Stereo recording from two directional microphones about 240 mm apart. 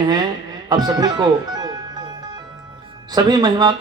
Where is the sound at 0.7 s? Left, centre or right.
Centre.